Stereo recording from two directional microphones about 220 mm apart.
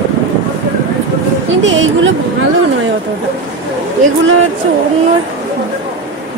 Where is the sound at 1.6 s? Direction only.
60° right (ahead or behind).